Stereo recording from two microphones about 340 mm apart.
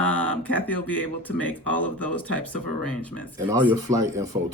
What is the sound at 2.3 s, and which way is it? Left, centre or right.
Speech, right.